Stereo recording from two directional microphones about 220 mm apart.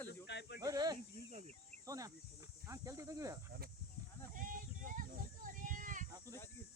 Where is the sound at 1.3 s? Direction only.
30° right (ahead or behind).